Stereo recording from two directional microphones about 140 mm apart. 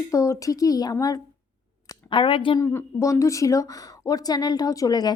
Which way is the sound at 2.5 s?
20° left (ahead or behind).